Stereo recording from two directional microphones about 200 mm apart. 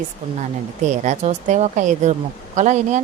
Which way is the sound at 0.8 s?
35° right (ahead or behind).